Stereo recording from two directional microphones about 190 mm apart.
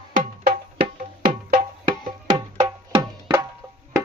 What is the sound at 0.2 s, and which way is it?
Music, 45° right (ahead or behind).